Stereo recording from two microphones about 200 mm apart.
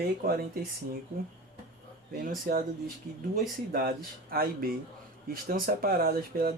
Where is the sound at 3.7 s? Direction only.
50° right (ahead or behind).